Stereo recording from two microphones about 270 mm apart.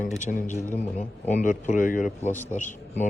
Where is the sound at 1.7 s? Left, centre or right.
Left.